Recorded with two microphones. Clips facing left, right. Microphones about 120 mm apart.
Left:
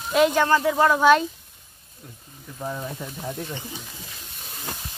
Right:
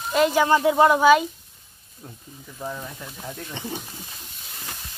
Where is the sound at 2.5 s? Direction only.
10° left (ahead or behind).